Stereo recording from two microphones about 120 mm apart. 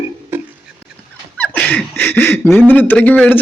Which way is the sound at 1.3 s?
10° left (ahead or behind).